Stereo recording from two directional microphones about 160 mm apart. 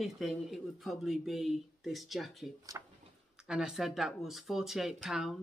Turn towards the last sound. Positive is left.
turn(degrees=0)  # may be behind; listen again after turning